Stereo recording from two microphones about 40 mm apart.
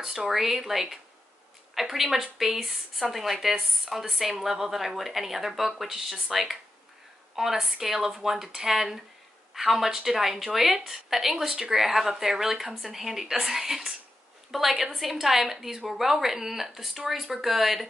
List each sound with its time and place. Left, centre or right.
0.0 s a woman's voice: centre